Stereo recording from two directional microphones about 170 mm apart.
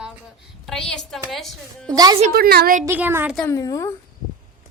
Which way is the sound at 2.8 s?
10° right (ahead or behind).